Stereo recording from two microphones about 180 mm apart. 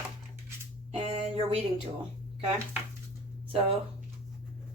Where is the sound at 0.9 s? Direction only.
30° right (ahead or behind).